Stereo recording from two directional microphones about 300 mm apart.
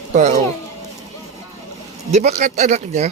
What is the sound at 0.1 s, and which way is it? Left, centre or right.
Speech, right.